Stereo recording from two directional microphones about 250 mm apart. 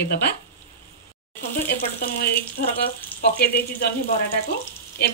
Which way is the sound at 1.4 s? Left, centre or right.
Left.